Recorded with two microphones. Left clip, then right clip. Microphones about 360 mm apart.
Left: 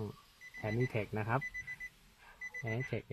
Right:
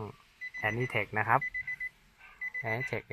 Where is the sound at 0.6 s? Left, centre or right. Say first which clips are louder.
Right 6 dB; right.